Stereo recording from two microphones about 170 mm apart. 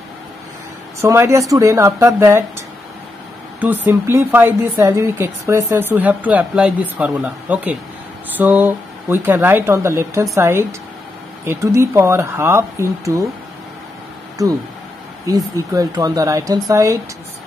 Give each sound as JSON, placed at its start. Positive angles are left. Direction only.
{"t": 1.0, "sound": "speech", "side_deg": -15}
{"t": 3.6, "sound": "speech", "side_deg": -10}
{"t": 15.2, "sound": "speech", "side_deg": -20}